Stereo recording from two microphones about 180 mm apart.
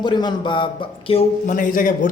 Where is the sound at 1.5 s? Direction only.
50° left (ahead or behind).